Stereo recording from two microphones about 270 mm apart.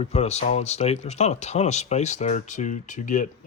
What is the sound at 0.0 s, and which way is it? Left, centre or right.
Speech, left.